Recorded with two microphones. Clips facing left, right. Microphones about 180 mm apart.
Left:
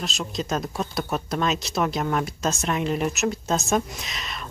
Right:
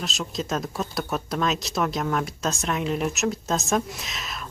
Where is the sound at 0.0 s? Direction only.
Centre (ahead or behind).